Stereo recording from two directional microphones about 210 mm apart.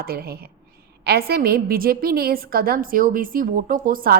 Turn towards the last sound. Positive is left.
turn(degrees=-40)  # may be behind; listen again after turning